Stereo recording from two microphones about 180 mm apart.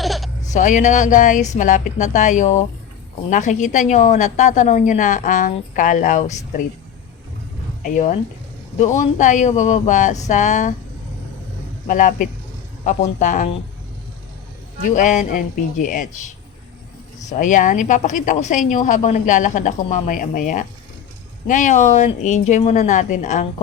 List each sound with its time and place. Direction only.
0.0 s a sound: centre (ahead or behind)
0.5 s a woman's voice: 45° left (ahead or behind)
7.9 s a woman's voice: 45° left (ahead or behind)
11.9 s a woman's voice: 45° left (ahead or behind)
14.9 s a woman's voice: 45° left (ahead or behind)